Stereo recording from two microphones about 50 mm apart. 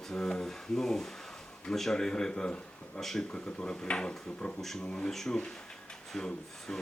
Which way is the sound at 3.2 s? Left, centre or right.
Centre.